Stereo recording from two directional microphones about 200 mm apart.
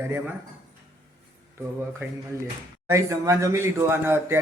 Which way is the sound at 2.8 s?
15° right (ahead or behind).